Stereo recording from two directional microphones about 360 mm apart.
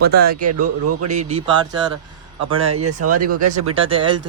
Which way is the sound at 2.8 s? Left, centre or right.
Right.